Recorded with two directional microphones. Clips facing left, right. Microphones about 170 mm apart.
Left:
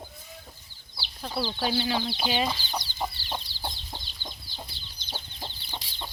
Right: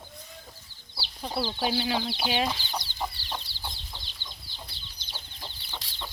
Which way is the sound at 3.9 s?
45° left (ahead or behind).